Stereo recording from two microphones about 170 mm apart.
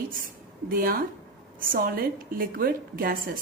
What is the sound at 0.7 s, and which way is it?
A woman's voice, 55° right (ahead or behind).